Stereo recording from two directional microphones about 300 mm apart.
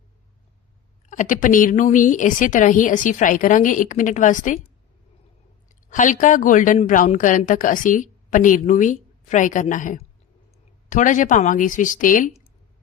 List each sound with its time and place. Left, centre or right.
1.1 s a woman's voice: left